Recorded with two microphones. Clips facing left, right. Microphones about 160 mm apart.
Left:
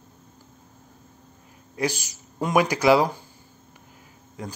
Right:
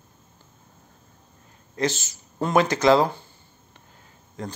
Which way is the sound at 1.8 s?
10° left (ahead or behind).